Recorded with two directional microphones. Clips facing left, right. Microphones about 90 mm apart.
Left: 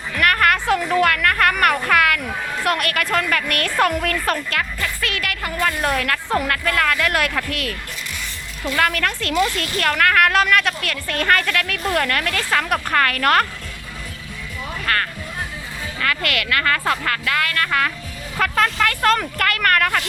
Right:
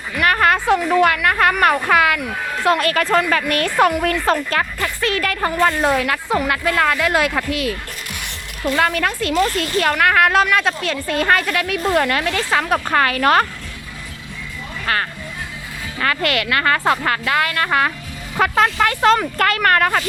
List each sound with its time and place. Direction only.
0.3 s music: 20° right (ahead or behind)
0.8 s a woman's voice: 5° right (ahead or behind)
1.0 s a woman's voice: 15° right (ahead or behind)
14.9 s speech: 15° right (ahead or behind)
16.0 s a woman's voice: 30° right (ahead or behind)